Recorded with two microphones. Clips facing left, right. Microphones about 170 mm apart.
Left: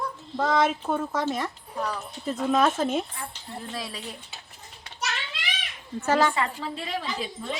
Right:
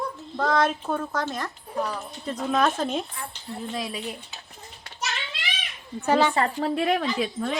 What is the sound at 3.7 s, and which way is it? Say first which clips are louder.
Speech: right 5 dB; 20° right (ahead or behind).